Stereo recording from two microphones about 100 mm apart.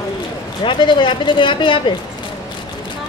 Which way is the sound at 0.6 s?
55° left (ahead or behind).